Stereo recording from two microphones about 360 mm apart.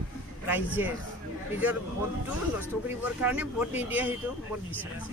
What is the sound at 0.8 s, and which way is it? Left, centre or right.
Speech, centre.